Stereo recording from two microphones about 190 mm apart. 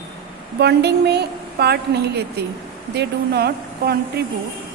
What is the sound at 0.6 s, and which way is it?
A woman's voice, 60° right (ahead or behind).